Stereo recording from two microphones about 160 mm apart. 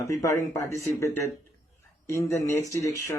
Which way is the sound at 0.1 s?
20° left (ahead or behind).